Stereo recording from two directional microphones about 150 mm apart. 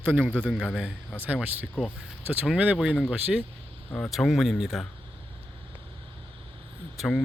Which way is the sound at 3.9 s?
5° left (ahead or behind).